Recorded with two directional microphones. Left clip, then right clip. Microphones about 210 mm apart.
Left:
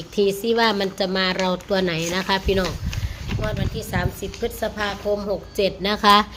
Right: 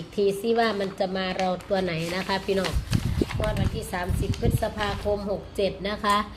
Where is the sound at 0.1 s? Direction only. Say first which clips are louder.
Left 4 dB; 25° left (ahead or behind).